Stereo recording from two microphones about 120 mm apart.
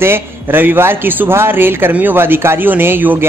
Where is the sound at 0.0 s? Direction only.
20° right (ahead or behind).